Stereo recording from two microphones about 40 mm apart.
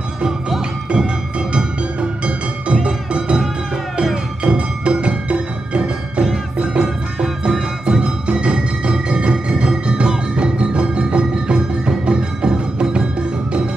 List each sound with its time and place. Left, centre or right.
0.8 s music: right
4.4 s music: right